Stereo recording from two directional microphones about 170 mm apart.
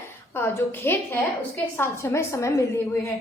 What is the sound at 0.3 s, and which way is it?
A woman's voice, 15° left (ahead or behind).